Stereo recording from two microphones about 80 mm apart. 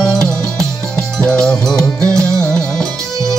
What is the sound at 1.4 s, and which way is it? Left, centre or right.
Music, centre.